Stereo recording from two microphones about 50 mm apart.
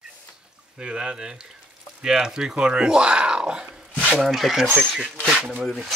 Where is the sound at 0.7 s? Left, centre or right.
Centre.